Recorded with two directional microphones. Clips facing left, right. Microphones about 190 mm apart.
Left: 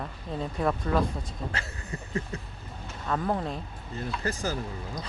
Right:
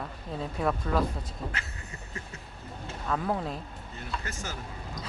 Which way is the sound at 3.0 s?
Centre (ahead or behind).